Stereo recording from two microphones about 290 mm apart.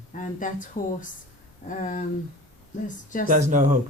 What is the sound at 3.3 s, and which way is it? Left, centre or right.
Speech, right.